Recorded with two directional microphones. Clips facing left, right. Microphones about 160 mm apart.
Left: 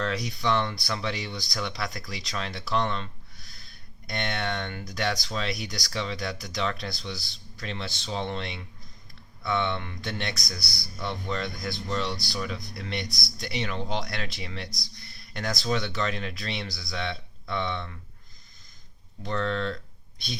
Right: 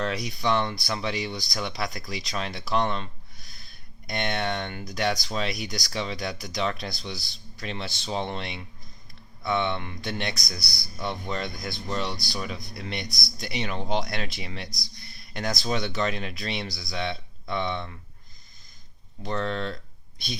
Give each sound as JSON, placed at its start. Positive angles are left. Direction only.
{"t": 0.0, "sound": "speech", "side_deg": -15}
{"t": 19.2, "sound": "speech", "side_deg": -15}